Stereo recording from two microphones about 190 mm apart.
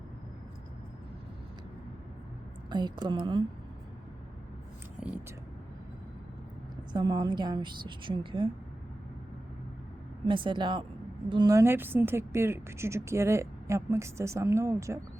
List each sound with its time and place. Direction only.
2.6 s a woman's voice: 25° right (ahead or behind)
4.9 s vehicle: 5° right (ahead or behind)
6.9 s a woman's voice: 20° right (ahead or behind)
10.2 s a woman's voice: 25° right (ahead or behind)